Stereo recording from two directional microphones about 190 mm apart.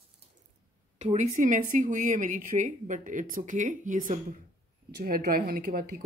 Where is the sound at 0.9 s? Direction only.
40° right (ahead or behind).